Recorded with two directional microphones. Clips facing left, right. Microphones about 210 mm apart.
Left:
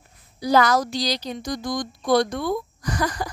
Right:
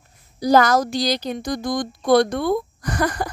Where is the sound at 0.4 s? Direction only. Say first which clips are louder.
Right 3 dB; 45° right (ahead or behind).